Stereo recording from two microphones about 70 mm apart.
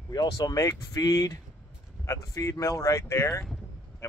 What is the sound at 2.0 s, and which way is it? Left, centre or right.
Speech, left.